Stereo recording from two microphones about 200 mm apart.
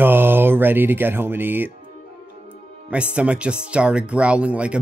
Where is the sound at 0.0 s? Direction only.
10° right (ahead or behind).